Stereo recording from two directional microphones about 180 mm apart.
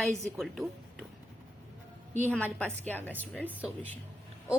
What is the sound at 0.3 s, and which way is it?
Speech, centre (ahead or behind).